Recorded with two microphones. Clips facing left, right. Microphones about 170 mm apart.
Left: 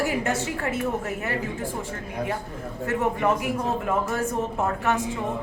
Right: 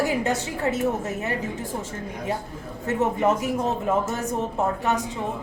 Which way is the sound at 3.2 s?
20° right (ahead or behind).